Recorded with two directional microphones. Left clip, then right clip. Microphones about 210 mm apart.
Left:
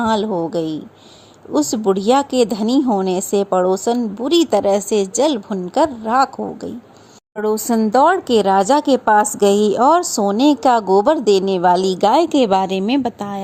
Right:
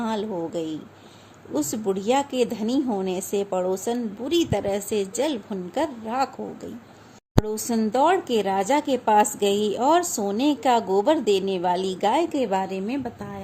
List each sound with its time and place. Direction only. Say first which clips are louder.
0.0 s a woman's voice: left 10 dB; 35° left (ahead or behind)
7.9 s a woman's voice: left 7 dB; 30° left (ahead or behind)